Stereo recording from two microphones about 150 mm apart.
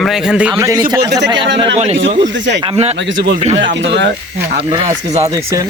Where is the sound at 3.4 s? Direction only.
45° right (ahead or behind).